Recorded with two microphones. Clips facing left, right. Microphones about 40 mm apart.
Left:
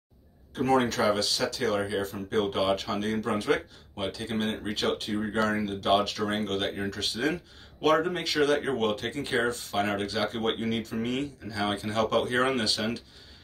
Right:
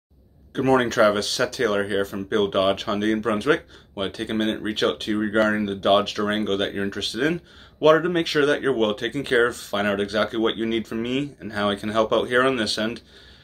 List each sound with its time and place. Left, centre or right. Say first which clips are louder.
0.5 s speech: right 5 dB; right